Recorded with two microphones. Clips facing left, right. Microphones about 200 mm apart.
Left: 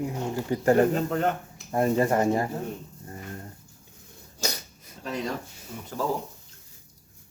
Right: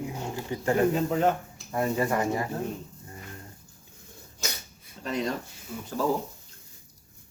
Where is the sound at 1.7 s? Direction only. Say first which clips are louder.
Left 4 dB; 30° left (ahead or behind).